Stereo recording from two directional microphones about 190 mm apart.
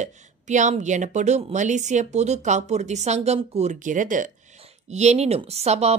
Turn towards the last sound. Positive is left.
turn(degrees=-35)  # may be behind; listen again after turning